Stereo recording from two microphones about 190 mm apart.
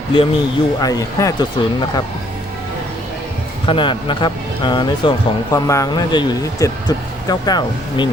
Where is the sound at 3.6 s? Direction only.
25° left (ahead or behind).